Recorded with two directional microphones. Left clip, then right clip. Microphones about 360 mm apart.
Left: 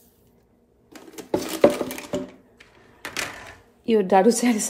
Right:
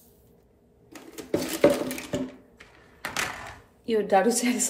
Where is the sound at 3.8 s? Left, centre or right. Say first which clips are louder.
Left 5 dB; centre.